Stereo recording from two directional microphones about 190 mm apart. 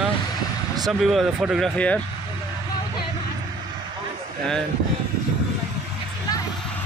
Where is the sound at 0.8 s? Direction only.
Centre (ahead or behind).